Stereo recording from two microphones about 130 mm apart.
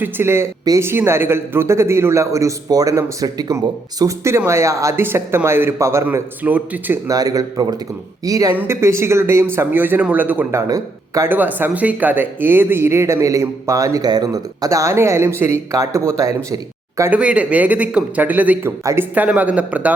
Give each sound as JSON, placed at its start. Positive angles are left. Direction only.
{"t": 0.0, "sound": "speech", "side_deg": -20}
{"t": 7.1, "sound": "speech", "side_deg": -25}
{"t": 10.7, "sound": "speech", "side_deg": -25}
{"t": 11.3, "sound": "speech", "side_deg": -15}
{"t": 17.1, "sound": "speech", "side_deg": -10}